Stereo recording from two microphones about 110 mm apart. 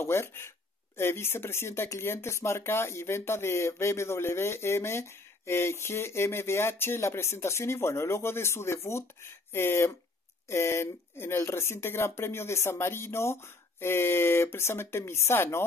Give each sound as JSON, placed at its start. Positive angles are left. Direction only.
{"t": 0.0, "sound": "speech", "side_deg": 25}